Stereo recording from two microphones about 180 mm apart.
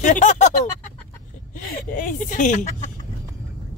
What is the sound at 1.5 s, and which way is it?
Speech, 50° left (ahead or behind).